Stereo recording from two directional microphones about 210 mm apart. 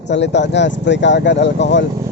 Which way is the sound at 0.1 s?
55° left (ahead or behind).